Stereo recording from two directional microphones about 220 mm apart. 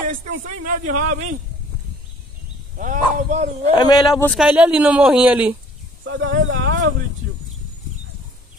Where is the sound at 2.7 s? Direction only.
35° right (ahead or behind).